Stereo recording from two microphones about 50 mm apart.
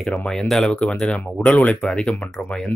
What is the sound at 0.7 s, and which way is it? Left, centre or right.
Speech, centre.